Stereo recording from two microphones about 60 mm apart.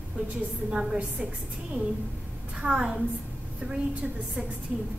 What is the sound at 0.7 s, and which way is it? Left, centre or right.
Speech, centre.